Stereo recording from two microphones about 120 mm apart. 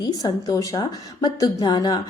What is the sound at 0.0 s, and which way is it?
A woman's voice, 30° left (ahead or behind).